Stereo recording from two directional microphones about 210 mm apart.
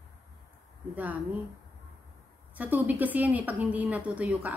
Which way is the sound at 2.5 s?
10° right (ahead or behind).